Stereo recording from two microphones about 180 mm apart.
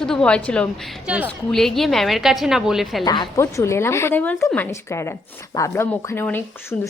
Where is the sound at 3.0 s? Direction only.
25° left (ahead or behind).